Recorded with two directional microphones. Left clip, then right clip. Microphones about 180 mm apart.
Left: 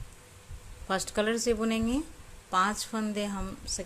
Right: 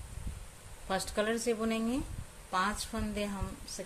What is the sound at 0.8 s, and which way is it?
Speech, 35° left (ahead or behind).